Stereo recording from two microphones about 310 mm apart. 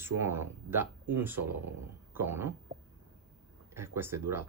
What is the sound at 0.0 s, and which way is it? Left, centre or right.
Speech, centre.